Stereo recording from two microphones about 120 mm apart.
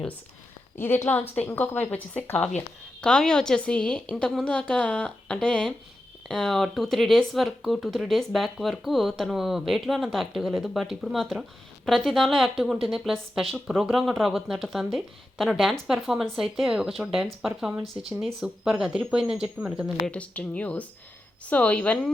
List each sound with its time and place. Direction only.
0.8 s a woman's voice: 20° left (ahead or behind); by 19.9 s 10° right (ahead or behind)
20.1 s speech: 10° left (ahead or behind)